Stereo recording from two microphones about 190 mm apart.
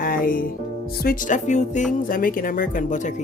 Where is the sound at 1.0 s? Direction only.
45° left (ahead or behind).